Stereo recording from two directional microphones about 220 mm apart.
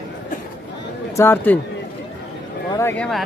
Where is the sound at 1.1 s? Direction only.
10° left (ahead or behind).